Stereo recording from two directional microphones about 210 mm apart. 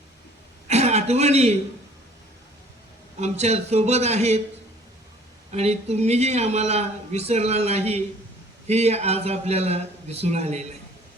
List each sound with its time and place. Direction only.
0.7 s a man's voice: 30° right (ahead or behind)
3.2 s a man's voice: 30° right (ahead or behind)
5.5 s a man's voice: 30° right (ahead or behind)